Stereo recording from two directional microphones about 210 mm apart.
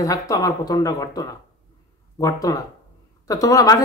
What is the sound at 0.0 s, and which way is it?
Speech, 15° left (ahead or behind).